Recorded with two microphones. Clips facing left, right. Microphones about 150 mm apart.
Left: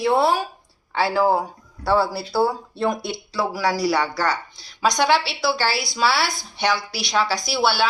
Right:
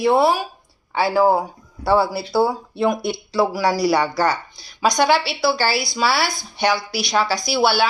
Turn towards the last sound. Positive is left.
turn(degrees=-5)  # may be behind; listen again after turning